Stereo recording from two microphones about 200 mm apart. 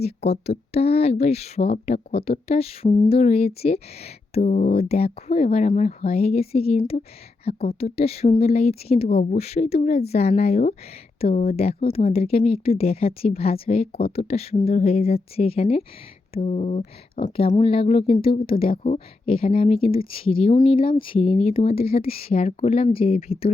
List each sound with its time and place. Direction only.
0.0 s speech: 30° left (ahead or behind)